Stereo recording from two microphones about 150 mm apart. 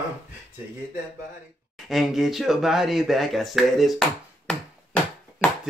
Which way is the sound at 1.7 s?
Centre (ahead or behind).